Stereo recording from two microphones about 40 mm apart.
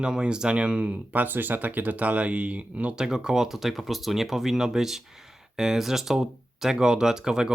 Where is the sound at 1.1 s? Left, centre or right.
Right.